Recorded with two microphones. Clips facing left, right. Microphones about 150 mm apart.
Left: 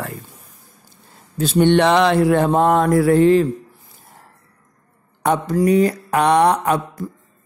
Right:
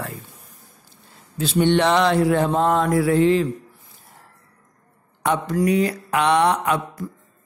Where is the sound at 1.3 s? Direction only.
45° left (ahead or behind).